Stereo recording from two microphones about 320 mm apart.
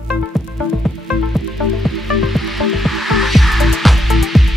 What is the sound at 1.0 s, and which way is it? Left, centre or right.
Music, centre.